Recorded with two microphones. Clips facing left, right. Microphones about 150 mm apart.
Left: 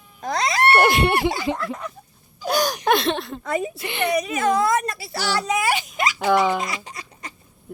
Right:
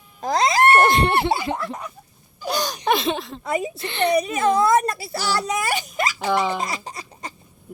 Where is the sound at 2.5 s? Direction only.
5° left (ahead or behind).